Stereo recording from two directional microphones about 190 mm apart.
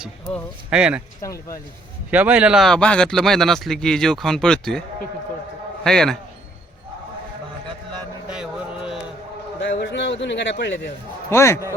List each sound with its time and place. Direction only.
0.0 s speech: centre (ahead or behind)
1.2 s speech: 15° left (ahead or behind)
2.0 s speech: 10° right (ahead or behind)
5.8 s speech: 5° left (ahead or behind)
9.8 s a man's voice: 65° left (ahead or behind)
11.3 s speech: 15° left (ahead or behind)